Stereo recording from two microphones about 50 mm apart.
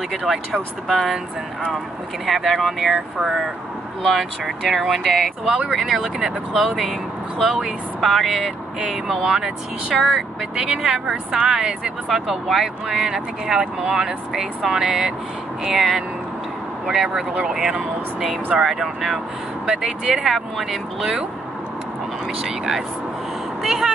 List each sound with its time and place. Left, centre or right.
0.2 s speech: centre
2.2 s speech: centre
4.0 s speech: centre
22.4 s speech: centre